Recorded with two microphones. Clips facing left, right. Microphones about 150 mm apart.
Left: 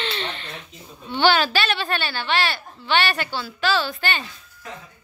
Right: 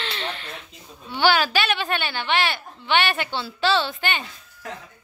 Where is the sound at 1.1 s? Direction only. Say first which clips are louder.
Left 1 dB; 10° right (ahead or behind).